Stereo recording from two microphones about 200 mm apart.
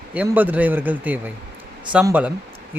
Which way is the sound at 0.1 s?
10° right (ahead or behind).